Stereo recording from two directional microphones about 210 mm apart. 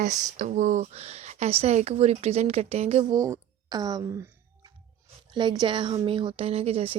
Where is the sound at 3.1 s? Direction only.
15° right (ahead or behind).